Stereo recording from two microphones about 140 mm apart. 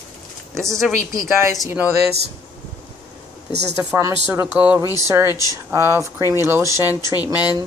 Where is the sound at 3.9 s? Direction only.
20° right (ahead or behind).